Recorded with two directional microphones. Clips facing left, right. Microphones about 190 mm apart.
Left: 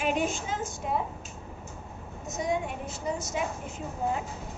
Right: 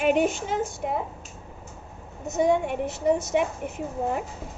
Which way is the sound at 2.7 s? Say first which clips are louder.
Right 9 dB; 65° right (ahead or behind).